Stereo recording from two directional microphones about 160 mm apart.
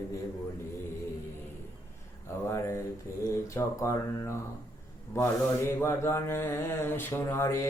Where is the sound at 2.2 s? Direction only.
15° left (ahead or behind).